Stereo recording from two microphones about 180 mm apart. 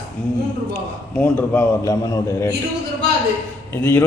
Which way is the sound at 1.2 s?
10° left (ahead or behind).